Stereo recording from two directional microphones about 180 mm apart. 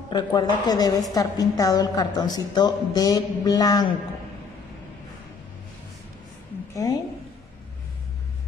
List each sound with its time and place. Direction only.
0.1 s a woman's voice: 25° left (ahead or behind)
6.7 s a woman's voice: 20° left (ahead or behind)